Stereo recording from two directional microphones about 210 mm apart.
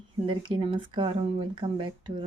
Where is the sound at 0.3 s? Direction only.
25° right (ahead or behind).